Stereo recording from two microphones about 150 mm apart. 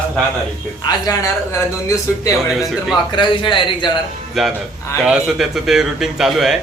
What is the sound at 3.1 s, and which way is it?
Speech, 30° left (ahead or behind).